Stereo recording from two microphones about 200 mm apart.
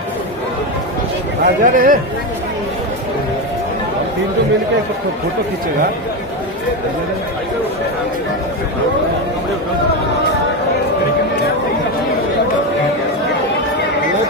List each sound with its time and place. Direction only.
1.4 s speech: 45° right (ahead or behind)